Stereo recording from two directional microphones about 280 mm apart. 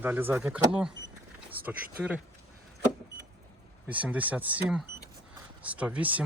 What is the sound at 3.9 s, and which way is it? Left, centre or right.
Speech, centre.